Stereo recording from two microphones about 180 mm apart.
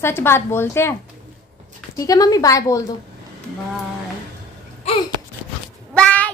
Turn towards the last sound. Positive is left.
turn(degrees=5)  # may be behind; listen again after turning